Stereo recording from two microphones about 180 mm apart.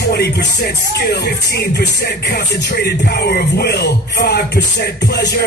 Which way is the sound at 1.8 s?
65° left (ahead or behind).